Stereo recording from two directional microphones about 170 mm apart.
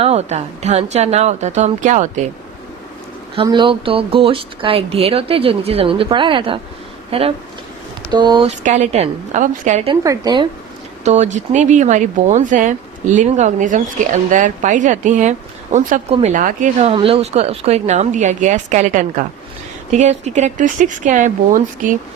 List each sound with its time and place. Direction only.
0.0 s speech: 40° right (ahead or behind)
3.3 s a woman's voice: 25° right (ahead or behind)
8.4 s speech: 45° right (ahead or behind)
9.9 s a woman's voice: 20° right (ahead or behind)
11.0 s speech: 45° right (ahead or behind)
16.9 s speech: 35° right (ahead or behind); by 21.9 s 50° right (ahead or behind)